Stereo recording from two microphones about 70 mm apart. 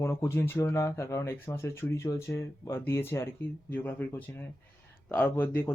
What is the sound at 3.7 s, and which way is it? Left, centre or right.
Speech, left.